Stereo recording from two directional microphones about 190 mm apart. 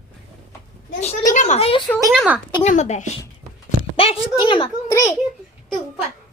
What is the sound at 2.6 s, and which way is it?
Speech, 35° left (ahead or behind).